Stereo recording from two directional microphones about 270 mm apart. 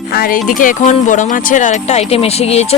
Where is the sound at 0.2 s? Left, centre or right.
Left.